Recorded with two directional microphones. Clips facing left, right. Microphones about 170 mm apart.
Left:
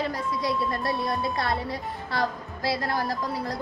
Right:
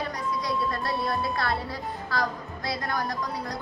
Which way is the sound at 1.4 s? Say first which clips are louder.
Left 1 dB; 25° left (ahead or behind).